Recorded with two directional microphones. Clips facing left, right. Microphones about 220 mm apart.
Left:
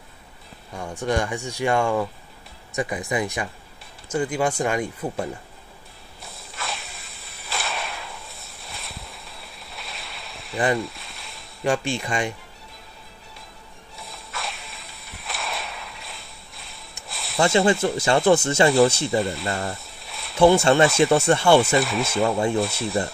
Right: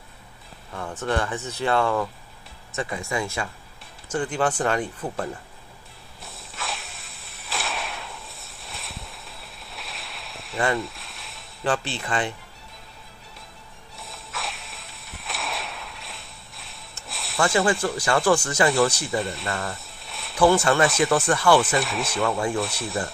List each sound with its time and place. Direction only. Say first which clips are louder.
0.7 s speech: left 2 dB; 15° left (ahead or behind)
6.2 s a sound: left 1 dB; centre (ahead or behind)
11.6 s speech: left 3 dB; 15° left (ahead or behind)
13.9 s a sound: left 1 dB; centre (ahead or behind)
17.1 s snake: left 1 dB; centre (ahead or behind)
17.4 s speech: left 3 dB; 25° left (ahead or behind)
19.1 s speech: left 3 dB; centre (ahead or behind)
19.7 s a sound: left 2 dB; centre (ahead or behind)
20.3 s speech: left 3 dB; 25° left (ahead or behind)
21.7 s speech: left 4 dB; centre (ahead or behind)